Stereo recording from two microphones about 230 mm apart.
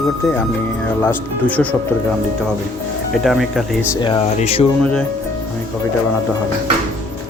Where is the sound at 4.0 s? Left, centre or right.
Left.